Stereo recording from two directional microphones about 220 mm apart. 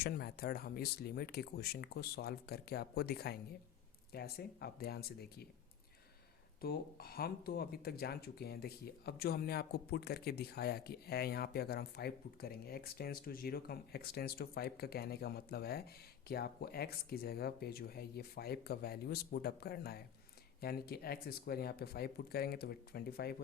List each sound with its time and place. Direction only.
0.0 s speech: 45° left (ahead or behind)
6.6 s speech: 45° left (ahead or behind)